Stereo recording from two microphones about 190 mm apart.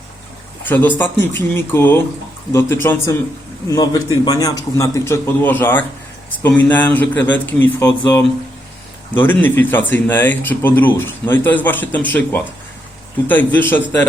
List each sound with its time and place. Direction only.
0.6 s speech: 10° left (ahead or behind)